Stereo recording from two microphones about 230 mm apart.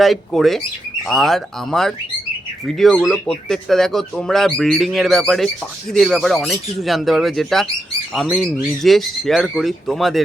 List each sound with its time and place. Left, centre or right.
0.0 s speech: centre